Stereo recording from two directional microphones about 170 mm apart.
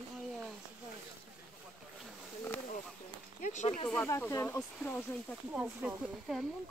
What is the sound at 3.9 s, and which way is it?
Speech, 15° left (ahead or behind).